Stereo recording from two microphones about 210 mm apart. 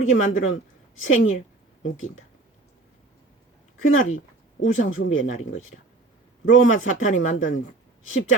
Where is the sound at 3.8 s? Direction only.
75° left (ahead or behind).